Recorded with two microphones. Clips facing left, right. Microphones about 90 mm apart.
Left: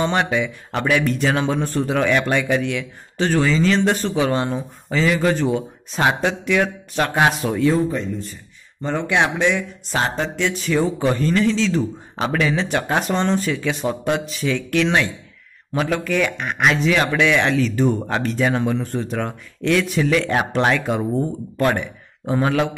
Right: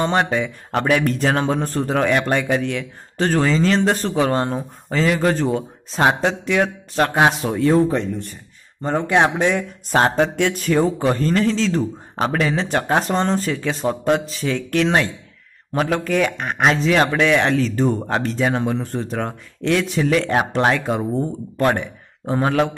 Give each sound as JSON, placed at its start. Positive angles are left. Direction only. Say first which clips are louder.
{"t": 0.0, "sound": "speech", "louder": "right 1 dB", "side_deg": -40}
{"t": 7.8, "sound": "speech", "louder": "right 3 dB", "side_deg": -65}
{"t": 8.8, "sound": "speech", "louder": "right 3 dB", "side_deg": -40}
{"t": 10.6, "sound": "a man's voice", "louder": "right 1 dB", "side_deg": -40}